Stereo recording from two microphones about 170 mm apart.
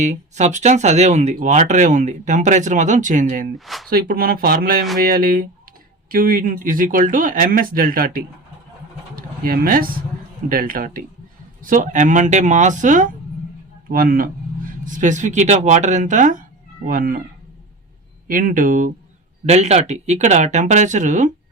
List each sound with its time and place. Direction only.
0.0 s speech: 45° right (ahead or behind)
3.8 s speech: 60° right (ahead or behind)
18.3 s speech: 55° right (ahead or behind)
19.5 s speech: 40° right (ahead or behind)